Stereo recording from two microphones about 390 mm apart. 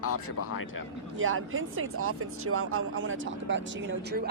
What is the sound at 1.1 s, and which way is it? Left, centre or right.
Speech, right.